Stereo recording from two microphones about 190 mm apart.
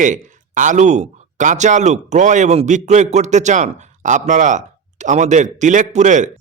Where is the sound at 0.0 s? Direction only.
40° right (ahead or behind).